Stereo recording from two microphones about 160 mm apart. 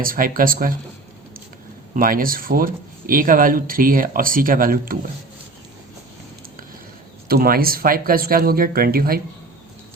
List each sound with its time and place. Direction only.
0.0 s speech: 60° right (ahead or behind)
2.0 s speech: 60° right (ahead or behind)
7.3 s speech: 70° right (ahead or behind)